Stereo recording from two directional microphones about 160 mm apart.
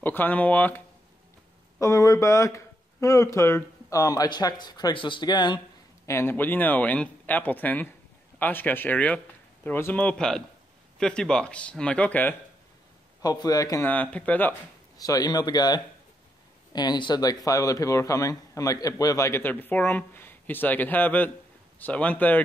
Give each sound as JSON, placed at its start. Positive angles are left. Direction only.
{"t": 0.0, "sound": "speech", "side_deg": 10}
{"t": 6.0, "sound": "speech", "side_deg": 15}
{"t": 13.2, "sound": "speech", "side_deg": 25}
{"t": 14.1, "sound": "speech", "side_deg": 10}
{"t": 15.0, "sound": "speech", "side_deg": 25}